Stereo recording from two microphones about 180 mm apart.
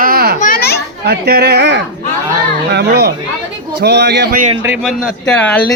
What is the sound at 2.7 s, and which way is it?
A man's voice, 60° right (ahead or behind).